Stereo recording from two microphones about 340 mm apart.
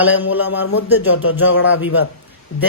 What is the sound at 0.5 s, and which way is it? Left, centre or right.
Speech, left.